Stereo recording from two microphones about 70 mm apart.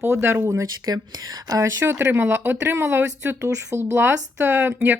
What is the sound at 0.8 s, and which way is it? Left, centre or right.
Speech, right.